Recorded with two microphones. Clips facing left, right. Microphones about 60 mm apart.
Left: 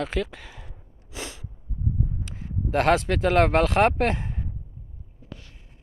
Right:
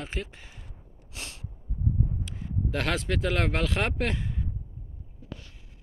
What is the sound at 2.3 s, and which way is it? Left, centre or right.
Speech, left.